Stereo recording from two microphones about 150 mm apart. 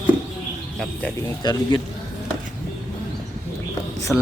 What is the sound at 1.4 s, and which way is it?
Speech, 30° left (ahead or behind).